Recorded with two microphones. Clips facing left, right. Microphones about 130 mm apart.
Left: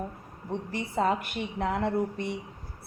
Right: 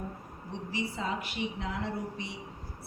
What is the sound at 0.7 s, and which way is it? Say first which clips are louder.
A woman's voice: left 6 dB; 55° left (ahead or behind).